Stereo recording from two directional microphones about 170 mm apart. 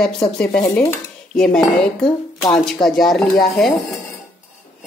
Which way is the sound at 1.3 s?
5° left (ahead or behind).